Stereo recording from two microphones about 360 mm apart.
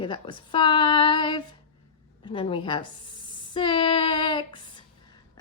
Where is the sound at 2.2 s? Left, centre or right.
Centre.